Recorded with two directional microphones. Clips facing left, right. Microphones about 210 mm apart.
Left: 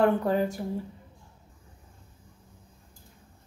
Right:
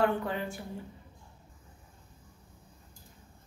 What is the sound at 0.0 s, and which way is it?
Speech, 40° left (ahead or behind).